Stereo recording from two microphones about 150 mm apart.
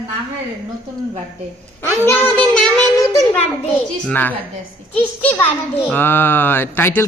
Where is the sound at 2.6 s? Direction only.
10° left (ahead or behind).